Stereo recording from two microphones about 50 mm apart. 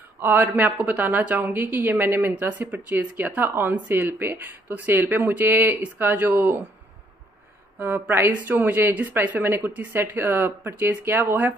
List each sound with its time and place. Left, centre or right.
0.2 s speech: right
3.4 s speech: right
5.0 s speech: right
5.3 s speech: right
7.8 s speech: right
8.3 s speech: right
9.4 s speech: right